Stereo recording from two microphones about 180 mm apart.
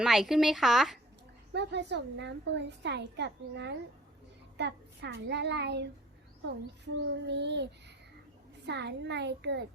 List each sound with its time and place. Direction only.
0.0 s a woman's voice: centre (ahead or behind)
1.5 s a woman's voice: 70° right (ahead or behind)